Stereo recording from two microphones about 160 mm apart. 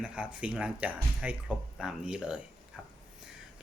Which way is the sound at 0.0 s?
10° right (ahead or behind).